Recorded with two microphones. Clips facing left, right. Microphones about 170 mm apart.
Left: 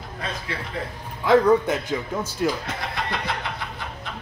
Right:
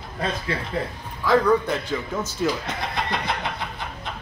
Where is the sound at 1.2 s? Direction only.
20° left (ahead or behind).